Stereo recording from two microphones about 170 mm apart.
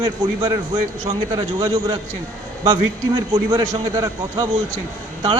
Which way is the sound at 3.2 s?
20° right (ahead or behind).